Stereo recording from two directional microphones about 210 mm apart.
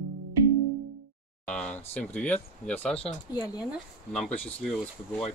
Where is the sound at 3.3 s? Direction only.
20° left (ahead or behind).